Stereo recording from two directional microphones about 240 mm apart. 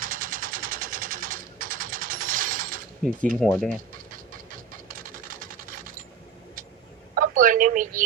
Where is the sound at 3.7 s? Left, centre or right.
Right.